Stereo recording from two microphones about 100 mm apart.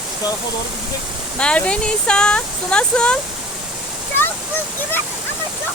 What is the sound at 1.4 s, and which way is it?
Speech, 10° left (ahead or behind).